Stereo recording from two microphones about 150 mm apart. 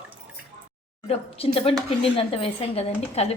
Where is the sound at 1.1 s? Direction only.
40° left (ahead or behind).